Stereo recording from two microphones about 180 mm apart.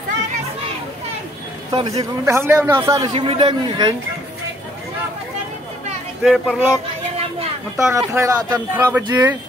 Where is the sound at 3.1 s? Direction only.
35° right (ahead or behind).